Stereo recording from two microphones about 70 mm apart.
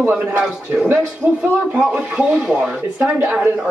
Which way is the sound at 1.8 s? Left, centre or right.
Centre.